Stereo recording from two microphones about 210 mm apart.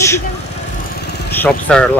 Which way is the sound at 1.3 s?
5° left (ahead or behind).